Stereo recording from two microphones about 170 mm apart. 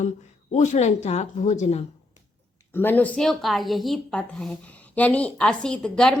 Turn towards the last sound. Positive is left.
turn(degrees=5)  # may be behind; listen again after turning